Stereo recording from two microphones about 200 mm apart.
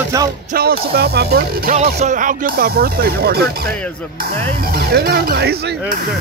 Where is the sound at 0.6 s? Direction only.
50° right (ahead or behind).